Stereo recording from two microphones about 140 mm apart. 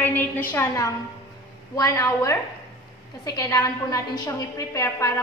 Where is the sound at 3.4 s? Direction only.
25° left (ahead or behind).